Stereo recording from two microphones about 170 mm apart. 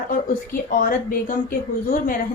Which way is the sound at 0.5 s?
55° left (ahead or behind).